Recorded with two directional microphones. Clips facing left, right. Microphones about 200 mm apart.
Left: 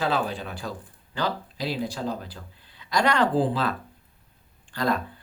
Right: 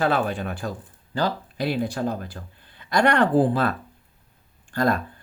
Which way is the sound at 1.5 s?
55° right (ahead or behind).